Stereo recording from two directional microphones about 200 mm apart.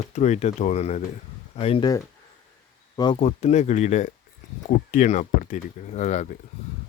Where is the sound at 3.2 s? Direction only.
35° left (ahead or behind).